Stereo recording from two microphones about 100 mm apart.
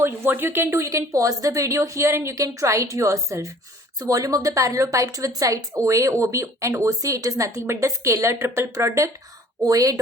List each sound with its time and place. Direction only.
0.0 s a woman's voice: 20° right (ahead or behind)